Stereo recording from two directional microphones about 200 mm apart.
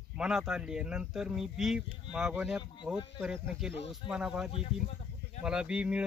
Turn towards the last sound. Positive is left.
turn(degrees=-5)  # may be behind; listen again after turning